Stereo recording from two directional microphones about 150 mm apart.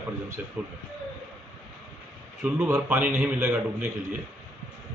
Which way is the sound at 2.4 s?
10° right (ahead or behind).